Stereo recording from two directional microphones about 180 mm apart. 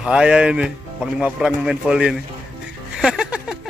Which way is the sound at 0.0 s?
5° right (ahead or behind).